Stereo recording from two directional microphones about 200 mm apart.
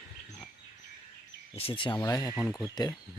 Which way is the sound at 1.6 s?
25° left (ahead or behind).